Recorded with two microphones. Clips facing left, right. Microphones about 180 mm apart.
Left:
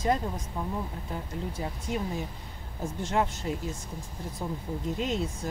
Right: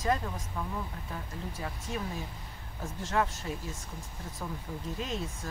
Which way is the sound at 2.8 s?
15° left (ahead or behind).